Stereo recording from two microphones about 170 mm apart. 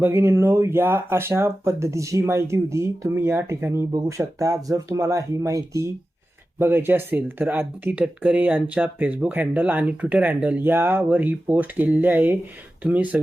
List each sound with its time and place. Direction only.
0.0 s speech: 15° right (ahead or behind)